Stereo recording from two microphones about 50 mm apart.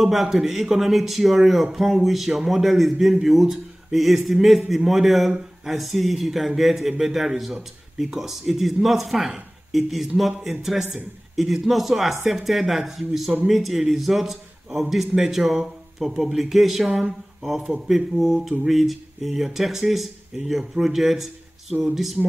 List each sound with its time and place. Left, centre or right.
0.0 s speech: centre